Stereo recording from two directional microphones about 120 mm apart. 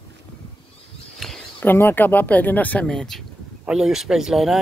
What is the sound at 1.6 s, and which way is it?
Speech, 20° left (ahead or behind).